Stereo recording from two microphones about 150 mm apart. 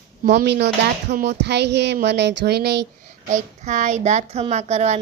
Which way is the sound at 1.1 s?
90° right.